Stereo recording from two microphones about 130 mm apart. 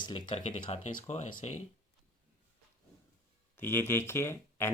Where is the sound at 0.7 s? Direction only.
65° left (ahead or behind).